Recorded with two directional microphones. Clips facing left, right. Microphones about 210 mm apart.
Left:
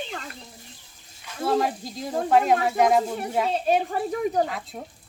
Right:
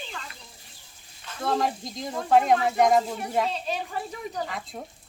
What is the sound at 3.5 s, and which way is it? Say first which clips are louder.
Speech: left 8 dB; 50° left (ahead or behind).